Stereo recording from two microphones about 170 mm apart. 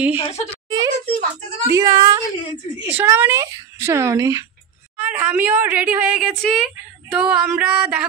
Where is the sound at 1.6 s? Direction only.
20° right (ahead or behind).